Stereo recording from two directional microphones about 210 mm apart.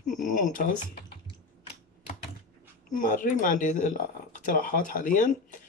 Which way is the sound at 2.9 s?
40° left (ahead or behind).